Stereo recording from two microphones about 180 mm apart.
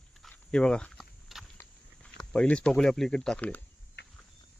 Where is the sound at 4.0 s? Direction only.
65° left (ahead or behind).